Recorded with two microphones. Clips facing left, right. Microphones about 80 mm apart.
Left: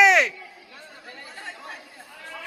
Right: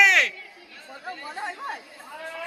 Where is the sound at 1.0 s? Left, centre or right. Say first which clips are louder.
Right 8 dB; right.